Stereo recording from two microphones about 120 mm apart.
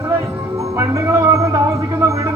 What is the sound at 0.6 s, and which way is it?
Speech, 25° right (ahead or behind).